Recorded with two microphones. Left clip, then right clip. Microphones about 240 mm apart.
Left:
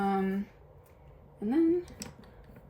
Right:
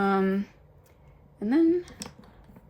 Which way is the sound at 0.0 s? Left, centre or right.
Right.